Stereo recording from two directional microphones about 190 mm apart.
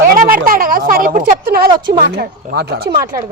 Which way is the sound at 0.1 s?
45° right (ahead or behind).